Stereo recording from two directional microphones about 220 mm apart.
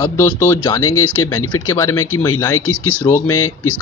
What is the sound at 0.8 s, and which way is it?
Speech, 75° left (ahead or behind).